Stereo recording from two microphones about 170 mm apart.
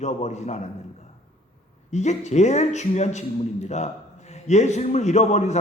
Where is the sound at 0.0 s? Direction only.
40° left (ahead or behind).